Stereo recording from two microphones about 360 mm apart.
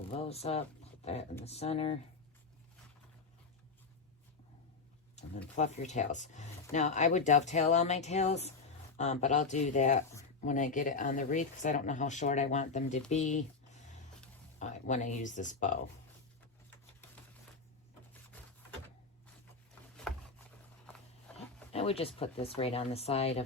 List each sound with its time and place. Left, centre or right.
0.1 s speech: centre
5.2 s a sound: centre
5.5 s speech: centre
21.3 s speech: centre